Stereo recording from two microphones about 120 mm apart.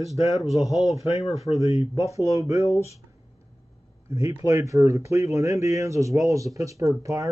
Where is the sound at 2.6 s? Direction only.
65° left (ahead or behind).